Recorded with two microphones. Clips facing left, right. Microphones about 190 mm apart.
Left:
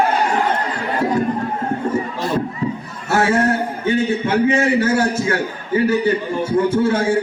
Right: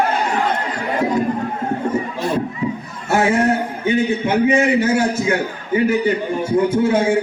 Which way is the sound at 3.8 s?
15° right (ahead or behind).